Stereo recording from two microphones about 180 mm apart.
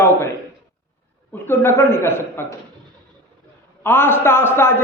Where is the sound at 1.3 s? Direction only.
15° left (ahead or behind).